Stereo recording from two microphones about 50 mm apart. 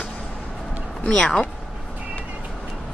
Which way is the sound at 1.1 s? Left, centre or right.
Centre.